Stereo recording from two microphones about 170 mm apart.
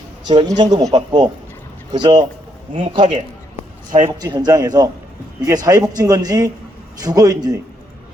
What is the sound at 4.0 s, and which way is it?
Speech, 25° right (ahead or behind).